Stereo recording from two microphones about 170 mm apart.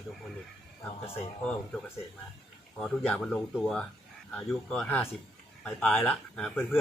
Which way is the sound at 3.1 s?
5° left (ahead or behind).